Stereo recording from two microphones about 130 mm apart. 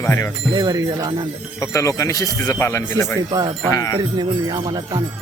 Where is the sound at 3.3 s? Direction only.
30° right (ahead or behind).